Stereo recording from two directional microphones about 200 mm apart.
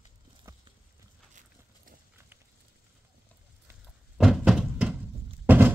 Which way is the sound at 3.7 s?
Centre (ahead or behind).